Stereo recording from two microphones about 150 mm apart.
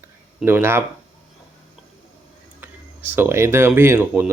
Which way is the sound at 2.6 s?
15° right (ahead or behind).